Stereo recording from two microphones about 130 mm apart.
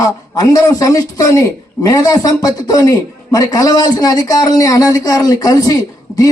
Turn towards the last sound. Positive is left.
turn(degrees=30)  # may be behind; listen again after turning